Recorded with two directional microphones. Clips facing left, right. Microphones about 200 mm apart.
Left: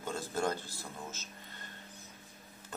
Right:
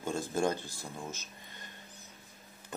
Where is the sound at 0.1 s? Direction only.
15° right (ahead or behind).